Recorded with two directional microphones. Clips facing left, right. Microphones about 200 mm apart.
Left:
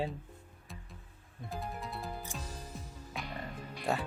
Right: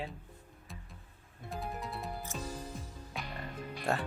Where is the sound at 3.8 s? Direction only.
Centre (ahead or behind).